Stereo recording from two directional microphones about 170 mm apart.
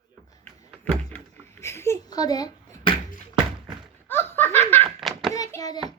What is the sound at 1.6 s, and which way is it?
A child's voice, 15° left (ahead or behind).